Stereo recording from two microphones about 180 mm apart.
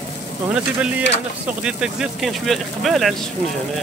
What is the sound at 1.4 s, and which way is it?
Speech, 5° right (ahead or behind).